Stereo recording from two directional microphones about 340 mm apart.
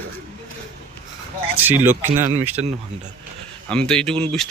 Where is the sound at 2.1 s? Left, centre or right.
Right.